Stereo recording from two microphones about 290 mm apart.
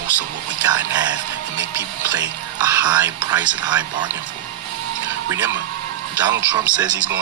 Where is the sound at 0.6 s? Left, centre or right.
Centre.